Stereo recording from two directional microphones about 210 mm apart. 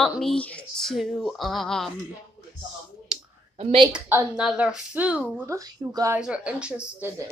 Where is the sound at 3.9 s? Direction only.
10° right (ahead or behind).